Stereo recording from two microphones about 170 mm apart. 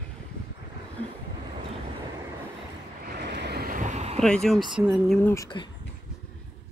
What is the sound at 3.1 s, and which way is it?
Waves, 90° right.